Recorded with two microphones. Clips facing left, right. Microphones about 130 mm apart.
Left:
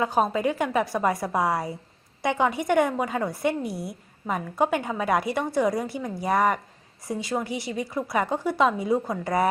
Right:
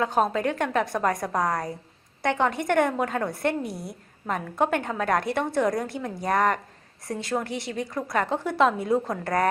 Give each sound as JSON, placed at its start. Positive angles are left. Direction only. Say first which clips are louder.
{"t": 0.0, "sound": "a woman's voice", "louder": "even", "side_deg": 5}